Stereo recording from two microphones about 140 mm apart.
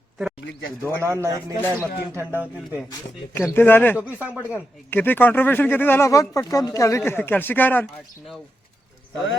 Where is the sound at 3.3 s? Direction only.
15° left (ahead or behind).